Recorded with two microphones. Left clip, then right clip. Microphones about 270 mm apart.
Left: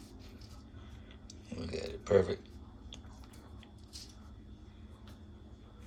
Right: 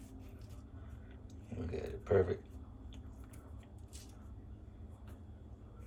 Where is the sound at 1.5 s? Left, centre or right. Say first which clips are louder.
Left 2 dB; centre.